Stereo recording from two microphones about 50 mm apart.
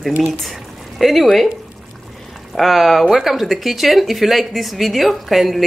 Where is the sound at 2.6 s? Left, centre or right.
Centre.